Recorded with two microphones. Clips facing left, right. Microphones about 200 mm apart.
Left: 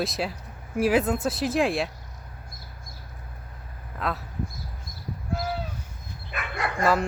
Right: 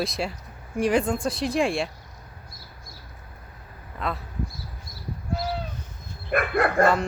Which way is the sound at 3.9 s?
Centre (ahead or behind).